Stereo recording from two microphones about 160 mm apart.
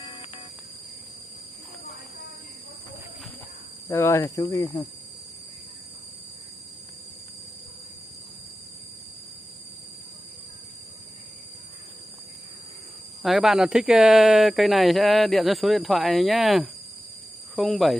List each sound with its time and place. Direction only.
0.0 s music: 30° left (ahead or behind)
3.9 s speech: 15° left (ahead or behind)
13.2 s speech: centre (ahead or behind)